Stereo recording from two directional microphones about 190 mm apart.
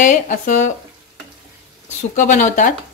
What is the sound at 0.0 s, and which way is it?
Speech, 40° left (ahead or behind).